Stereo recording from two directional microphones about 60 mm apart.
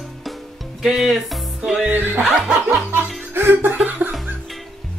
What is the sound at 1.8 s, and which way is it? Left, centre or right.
Speech, right.